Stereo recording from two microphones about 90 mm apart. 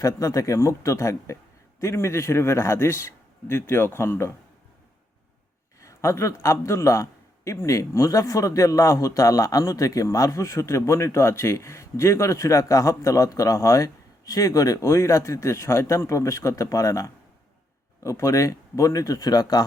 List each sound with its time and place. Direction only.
0.0 s a man's voice: 40° left (ahead or behind)
5.8 s a sound: 35° left (ahead or behind)
6.4 s a man's voice: 35° left (ahead or behind)